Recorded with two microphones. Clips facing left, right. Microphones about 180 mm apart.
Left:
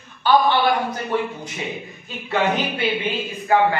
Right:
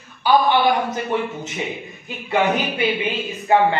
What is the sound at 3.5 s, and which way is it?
Speech, 25° right (ahead or behind).